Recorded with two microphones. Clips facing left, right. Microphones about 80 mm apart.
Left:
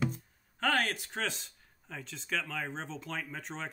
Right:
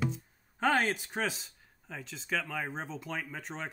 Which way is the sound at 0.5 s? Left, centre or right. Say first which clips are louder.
Right 3 dB; centre.